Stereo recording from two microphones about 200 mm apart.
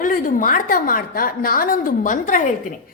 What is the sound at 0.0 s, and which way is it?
A woman's voice, 40° left (ahead or behind).